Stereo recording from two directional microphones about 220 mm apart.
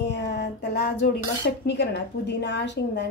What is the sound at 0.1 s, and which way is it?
Speech, 50° left (ahead or behind).